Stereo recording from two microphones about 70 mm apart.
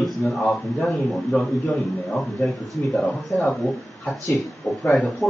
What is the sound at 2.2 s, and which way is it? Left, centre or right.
A man's voice, centre.